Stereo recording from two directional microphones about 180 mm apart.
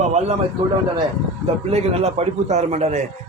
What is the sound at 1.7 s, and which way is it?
A man's voice, 35° right (ahead or behind).